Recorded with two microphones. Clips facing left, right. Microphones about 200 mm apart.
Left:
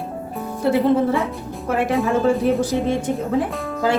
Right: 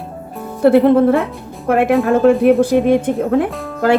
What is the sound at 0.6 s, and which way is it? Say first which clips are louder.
Speech: right 7 dB; 60° right (ahead or behind).